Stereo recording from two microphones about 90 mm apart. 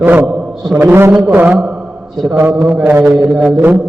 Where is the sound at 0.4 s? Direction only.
5° right (ahead or behind).